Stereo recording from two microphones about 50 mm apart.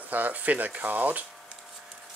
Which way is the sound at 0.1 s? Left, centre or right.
Right.